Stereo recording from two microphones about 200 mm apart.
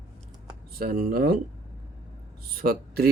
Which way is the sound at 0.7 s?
45° right (ahead or behind).